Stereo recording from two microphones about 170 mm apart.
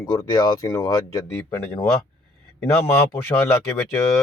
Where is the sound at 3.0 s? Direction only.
15° left (ahead or behind).